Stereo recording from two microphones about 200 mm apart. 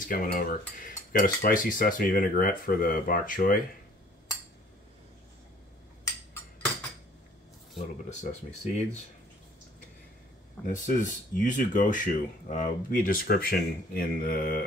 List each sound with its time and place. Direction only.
0.1 s speech: 45° left (ahead or behind)
7.7 s speech: 35° left (ahead or behind)
10.7 s speech: 40° left (ahead or behind)